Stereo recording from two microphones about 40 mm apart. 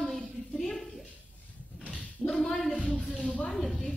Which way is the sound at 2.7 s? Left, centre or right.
Left.